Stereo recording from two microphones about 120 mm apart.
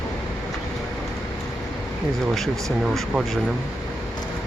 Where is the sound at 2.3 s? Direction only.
Centre (ahead or behind).